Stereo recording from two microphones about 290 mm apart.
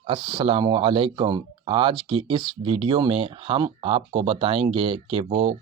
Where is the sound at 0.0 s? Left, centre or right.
Centre.